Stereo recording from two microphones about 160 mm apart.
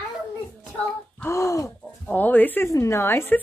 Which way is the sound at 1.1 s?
15° left (ahead or behind).